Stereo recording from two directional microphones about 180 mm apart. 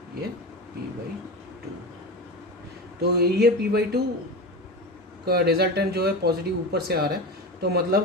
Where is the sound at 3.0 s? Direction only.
65° right (ahead or behind).